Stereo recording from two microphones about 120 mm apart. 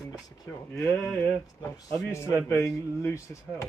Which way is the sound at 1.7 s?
25° left (ahead or behind).